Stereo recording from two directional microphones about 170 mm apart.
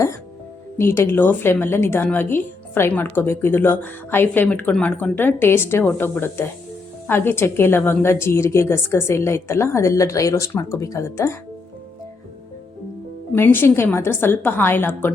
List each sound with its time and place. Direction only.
0.8 s a woman's voice: 15° left (ahead or behind)
13.3 s a woman's voice: 15° left (ahead or behind)